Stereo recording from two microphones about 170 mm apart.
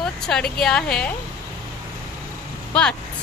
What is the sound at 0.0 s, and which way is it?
A woman's voice, 5° left (ahead or behind).